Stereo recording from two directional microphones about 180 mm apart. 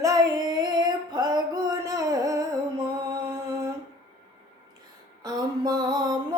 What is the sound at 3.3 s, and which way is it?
Mantra, 20° right (ahead or behind).